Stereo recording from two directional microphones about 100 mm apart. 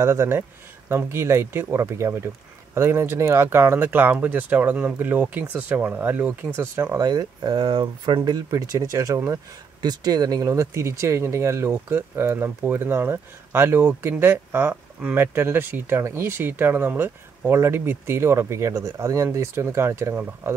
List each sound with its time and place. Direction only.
0.0 s speech: 25° right (ahead or behind)
7.0 s speech: 40° right (ahead or behind)
8.2 s speech: 35° right (ahead or behind)